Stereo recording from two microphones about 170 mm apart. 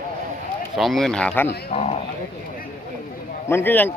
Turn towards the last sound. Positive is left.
turn(degrees=10)  # may be behind; listen again after turning